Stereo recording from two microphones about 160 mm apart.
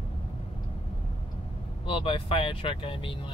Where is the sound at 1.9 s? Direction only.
35° left (ahead or behind).